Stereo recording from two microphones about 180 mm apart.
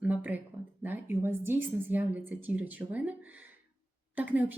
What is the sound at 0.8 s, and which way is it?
A woman's voice, 10° right (ahead or behind).